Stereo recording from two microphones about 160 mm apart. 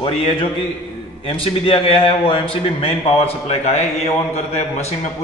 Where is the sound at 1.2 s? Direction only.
35° left (ahead or behind).